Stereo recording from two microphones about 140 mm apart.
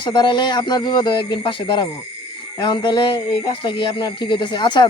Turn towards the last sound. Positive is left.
turn(degrees=35)  # may be behind; listen again after turning